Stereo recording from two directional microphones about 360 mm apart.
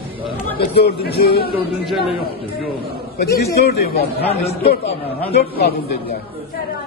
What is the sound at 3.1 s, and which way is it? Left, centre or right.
A man's voice, left.